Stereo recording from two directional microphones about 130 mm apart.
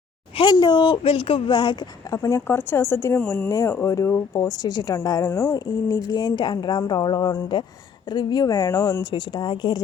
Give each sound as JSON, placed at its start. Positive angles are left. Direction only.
{"t": 0.3, "sound": "speech", "side_deg": 35}
{"t": 2.1, "sound": "speech", "side_deg": 25}
{"t": 5.3, "sound": "speech", "side_deg": 20}
{"t": 5.5, "sound": "speech", "side_deg": 30}